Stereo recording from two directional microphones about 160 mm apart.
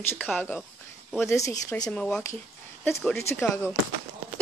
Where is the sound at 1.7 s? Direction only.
10° left (ahead or behind).